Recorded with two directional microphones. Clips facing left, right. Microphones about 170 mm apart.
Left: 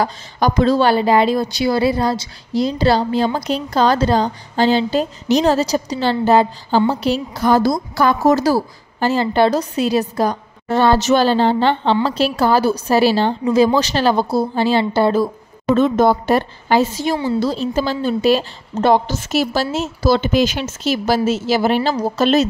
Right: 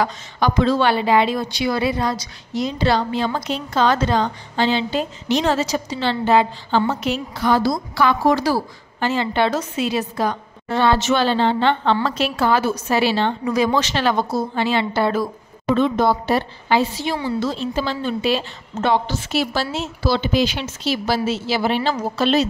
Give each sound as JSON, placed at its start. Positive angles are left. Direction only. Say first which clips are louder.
{"t": 0.0, "sound": "a woman's voice", "louder": "left 2 dB", "side_deg": 40}
{"t": 15.7, "sound": "a woman's voice", "louder": "left 4 dB", "side_deg": 45}